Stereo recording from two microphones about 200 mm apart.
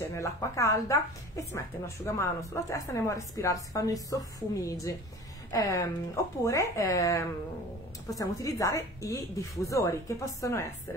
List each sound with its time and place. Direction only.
0.0 s a woman's voice: 15° left (ahead or behind)